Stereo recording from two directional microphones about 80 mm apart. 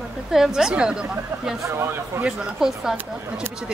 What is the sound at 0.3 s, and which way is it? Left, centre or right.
A woman's voice, centre.